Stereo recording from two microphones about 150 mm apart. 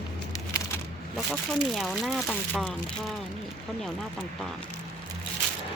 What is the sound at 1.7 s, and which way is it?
Speech, centre (ahead or behind).